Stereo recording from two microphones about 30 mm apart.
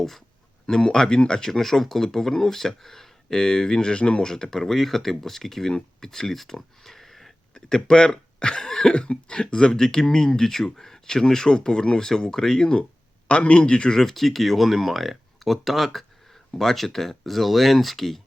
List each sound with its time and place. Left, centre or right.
0.7 s speech: left
4.3 s speech: left
4.6 s speech: centre
7.9 s speech: left
8.6 s cough: centre
8.9 s speech: left
13.2 s speech: left
13.9 s speech: centre